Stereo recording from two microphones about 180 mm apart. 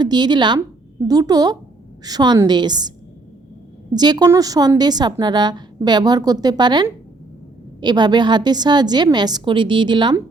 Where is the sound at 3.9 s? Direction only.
20° right (ahead or behind).